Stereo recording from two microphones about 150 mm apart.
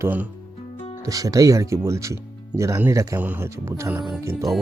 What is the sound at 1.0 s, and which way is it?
Speech, 25° right (ahead or behind).